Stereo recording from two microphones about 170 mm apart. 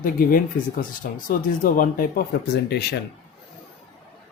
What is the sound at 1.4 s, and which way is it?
Speech, 50° left (ahead or behind).